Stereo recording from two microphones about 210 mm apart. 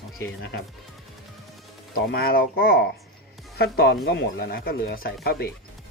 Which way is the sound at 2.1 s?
45° left (ahead or behind).